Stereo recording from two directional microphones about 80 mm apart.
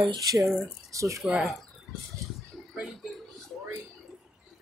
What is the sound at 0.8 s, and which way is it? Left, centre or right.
Speech, right.